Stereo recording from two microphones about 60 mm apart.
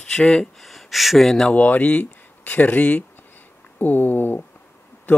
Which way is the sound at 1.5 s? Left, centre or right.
Left.